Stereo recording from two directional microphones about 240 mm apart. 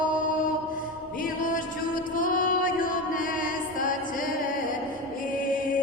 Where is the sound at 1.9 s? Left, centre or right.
Left.